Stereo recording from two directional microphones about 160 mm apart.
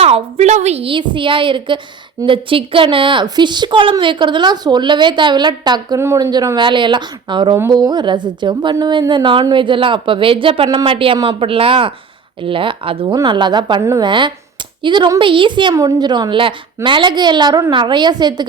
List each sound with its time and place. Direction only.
0.0 s a woman's voice: 40° right (ahead or behind); by 14.1 s 20° right (ahead or behind)
14.1 s a woman's voice: 30° right (ahead or behind)